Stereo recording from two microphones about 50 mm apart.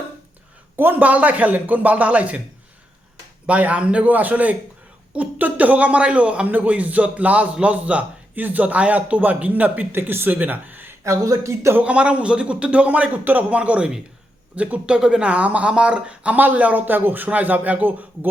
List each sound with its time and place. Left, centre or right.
0.8 s a man's voice: right
3.4 s a man's voice: right
10.1 s speech: right
11.0 s speech: right
11.8 s speech: right
13.6 s speech: right
14.9 s a man's voice: centre; by 18.3 s right